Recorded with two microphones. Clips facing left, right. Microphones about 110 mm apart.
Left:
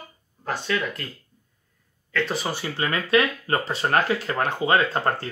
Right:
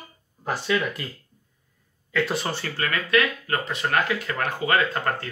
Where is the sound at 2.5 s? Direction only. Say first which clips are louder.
Left 1 dB; 10° left (ahead or behind).